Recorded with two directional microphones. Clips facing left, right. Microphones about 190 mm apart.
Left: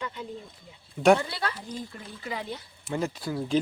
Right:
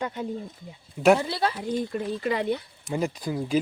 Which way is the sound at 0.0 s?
45° right (ahead or behind).